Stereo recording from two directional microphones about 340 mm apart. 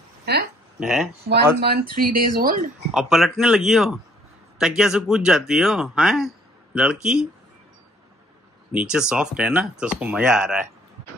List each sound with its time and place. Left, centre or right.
0.2 s a sound: right
0.7 s speech: centre
1.3 s speech: right
2.9 s speech: centre
8.7 s speech: centre